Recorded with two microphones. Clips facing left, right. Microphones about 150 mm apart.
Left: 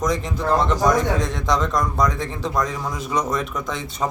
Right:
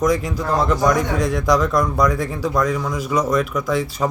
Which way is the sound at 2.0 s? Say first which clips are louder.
Right 4 dB; 20° left (ahead or behind).